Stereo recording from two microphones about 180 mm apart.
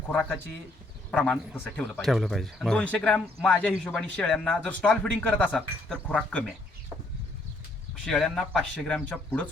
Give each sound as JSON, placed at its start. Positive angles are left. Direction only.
{"t": 0.1, "sound": "speech", "side_deg": 10}
{"t": 1.8, "sound": "speech", "side_deg": 0}
{"t": 8.0, "sound": "speech", "side_deg": 5}